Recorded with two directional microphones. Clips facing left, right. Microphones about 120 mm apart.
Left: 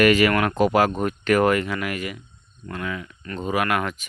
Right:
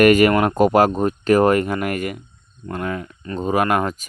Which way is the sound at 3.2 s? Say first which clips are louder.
Right 5 dB; 25° right (ahead or behind).